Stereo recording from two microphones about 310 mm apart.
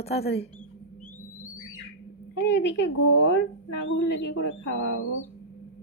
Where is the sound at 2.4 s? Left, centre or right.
Left.